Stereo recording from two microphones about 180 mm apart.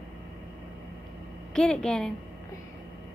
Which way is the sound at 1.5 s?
5° left (ahead or behind).